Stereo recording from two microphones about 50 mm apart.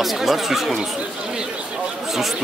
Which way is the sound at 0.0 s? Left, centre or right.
Centre.